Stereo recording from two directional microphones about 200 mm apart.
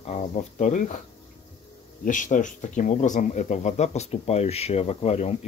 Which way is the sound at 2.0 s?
40° left (ahead or behind).